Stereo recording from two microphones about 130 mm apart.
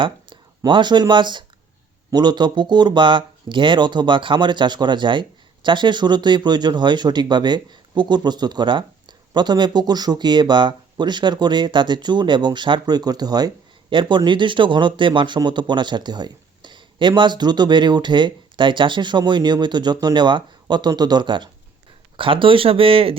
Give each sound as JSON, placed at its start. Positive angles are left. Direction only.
{"t": 0.0, "sound": "speech", "side_deg": -40}